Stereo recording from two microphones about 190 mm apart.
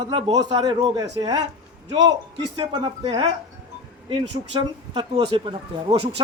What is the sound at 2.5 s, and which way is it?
Speech, 25° right (ahead or behind).